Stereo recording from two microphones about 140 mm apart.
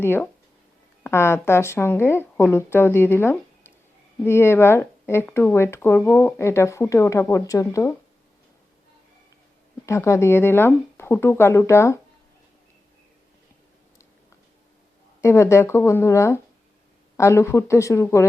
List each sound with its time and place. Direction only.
0.0 s speech: 15° left (ahead or behind)
9.8 s speech: 20° left (ahead or behind)
15.2 s speech: 20° left (ahead or behind)